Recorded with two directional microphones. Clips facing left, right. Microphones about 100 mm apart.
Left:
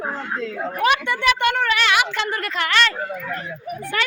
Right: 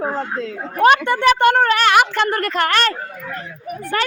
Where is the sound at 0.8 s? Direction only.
45° right (ahead or behind).